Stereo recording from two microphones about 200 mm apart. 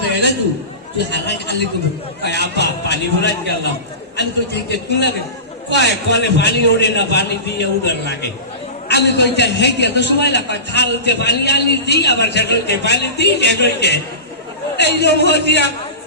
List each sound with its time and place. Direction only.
1.1 s a man's voice: 60° left (ahead or behind)